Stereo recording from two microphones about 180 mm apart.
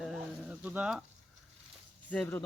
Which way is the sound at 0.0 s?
5° right (ahead or behind).